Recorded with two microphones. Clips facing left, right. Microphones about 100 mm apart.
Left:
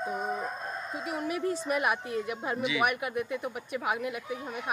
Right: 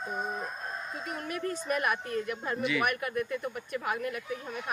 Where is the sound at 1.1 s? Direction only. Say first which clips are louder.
Left 4 dB; 15° left (ahead or behind).